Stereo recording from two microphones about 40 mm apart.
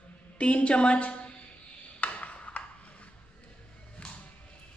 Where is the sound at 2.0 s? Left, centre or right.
Left.